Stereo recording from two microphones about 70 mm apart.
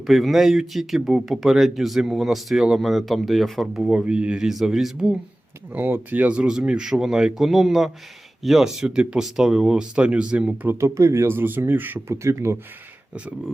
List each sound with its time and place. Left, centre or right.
0.0 s speech: centre
3.9 s speech: centre
4.4 s speech: centre
5.7 s speech: right
10.8 s speech: right
11.3 s speech: right
12.1 s speech: right